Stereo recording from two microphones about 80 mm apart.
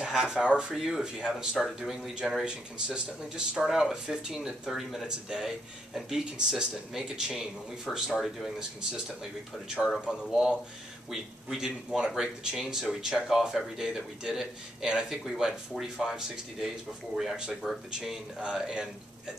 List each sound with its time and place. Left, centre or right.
0.0 s speech: centre
10.2 s speech: centre